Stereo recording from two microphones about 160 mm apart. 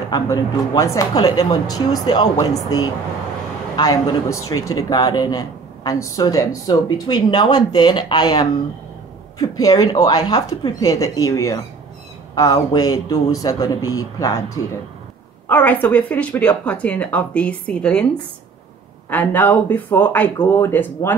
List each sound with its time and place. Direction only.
0.1 s speech: 20° left (ahead or behind)
3.7 s speech: 25° left (ahead or behind)
15.4 s a woman's voice: 10° left (ahead or behind)
19.0 s a woman's voice: 10° left (ahead or behind)